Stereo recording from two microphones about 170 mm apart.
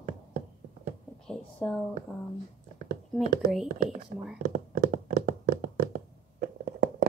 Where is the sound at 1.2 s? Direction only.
5° left (ahead or behind).